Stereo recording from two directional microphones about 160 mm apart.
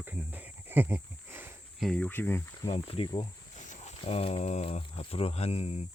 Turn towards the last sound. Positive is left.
turn(degrees=40)  # may be behind; listen again after turning